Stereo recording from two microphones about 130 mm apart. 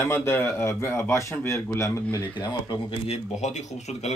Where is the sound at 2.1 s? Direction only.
35° left (ahead or behind).